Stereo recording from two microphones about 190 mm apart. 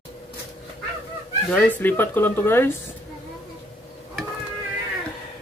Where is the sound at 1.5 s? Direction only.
10° left (ahead or behind).